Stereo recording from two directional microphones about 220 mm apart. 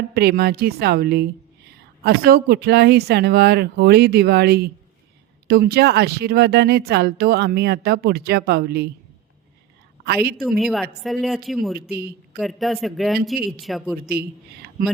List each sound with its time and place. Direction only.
0.1 s speech: 45° right (ahead or behind)
10.6 s speech: centre (ahead or behind)
11.9 s speech: 45° right (ahead or behind)
12.4 s speech: centre (ahead or behind)
14.1 s speech: 45° right (ahead or behind)